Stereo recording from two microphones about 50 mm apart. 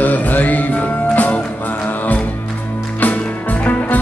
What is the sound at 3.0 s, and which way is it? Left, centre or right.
Music, left.